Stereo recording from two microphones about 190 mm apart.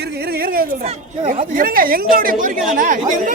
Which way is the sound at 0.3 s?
50° right (ahead or behind).